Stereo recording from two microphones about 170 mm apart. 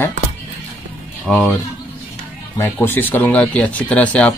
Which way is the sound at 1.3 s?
Centre (ahead or behind).